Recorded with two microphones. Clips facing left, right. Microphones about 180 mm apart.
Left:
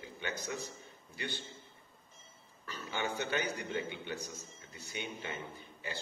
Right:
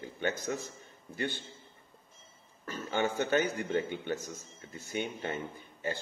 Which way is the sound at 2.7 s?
45° right (ahead or behind).